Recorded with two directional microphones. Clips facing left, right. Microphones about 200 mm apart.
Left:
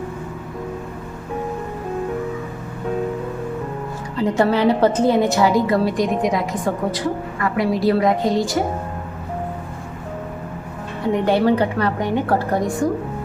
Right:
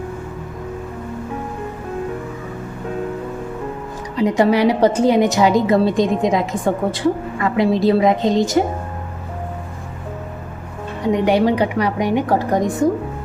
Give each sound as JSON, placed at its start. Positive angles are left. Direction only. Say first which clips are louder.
{"t": 4.2, "sound": "a woman's voice", "louder": "right 2 dB", "side_deg": -15}
{"t": 11.0, "sound": "a woman's voice", "louder": "right 2 dB", "side_deg": -15}